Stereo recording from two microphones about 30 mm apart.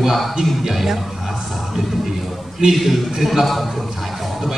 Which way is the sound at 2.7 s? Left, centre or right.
Centre.